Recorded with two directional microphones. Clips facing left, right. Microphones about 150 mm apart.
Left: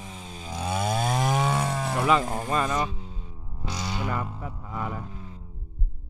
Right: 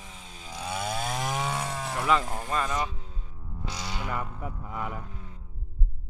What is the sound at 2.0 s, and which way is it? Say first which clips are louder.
Speech: left 3 dB; 15° left (ahead or behind).